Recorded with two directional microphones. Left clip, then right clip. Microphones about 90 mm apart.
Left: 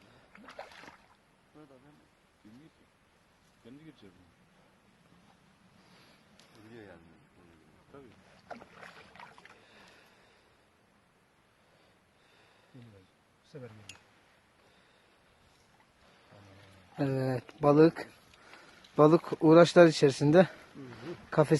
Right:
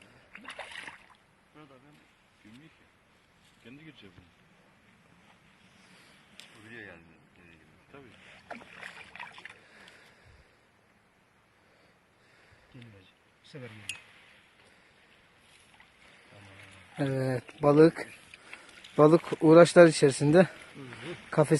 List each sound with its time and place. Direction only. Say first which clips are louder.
6.7 s speech: right 5 dB; 20° left (ahead or behind)
9.2 s rowboat: right 8 dB; 15° right (ahead or behind)
13.5 s speech: right 2 dB; 10° right (ahead or behind)
16.5 s a sound: right 6 dB; centre (ahead or behind)
17.2 s speech: right 1 dB; 10° left (ahead or behind)
20.3 s a sound: right 1 dB; 5° left (ahead or behind)